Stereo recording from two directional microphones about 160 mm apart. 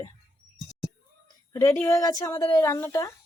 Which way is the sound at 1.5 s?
15° left (ahead or behind).